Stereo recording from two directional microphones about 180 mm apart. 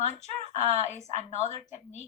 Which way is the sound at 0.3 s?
35° right (ahead or behind).